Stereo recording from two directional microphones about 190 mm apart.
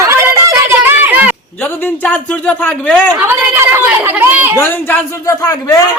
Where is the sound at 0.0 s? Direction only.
15° right (ahead or behind).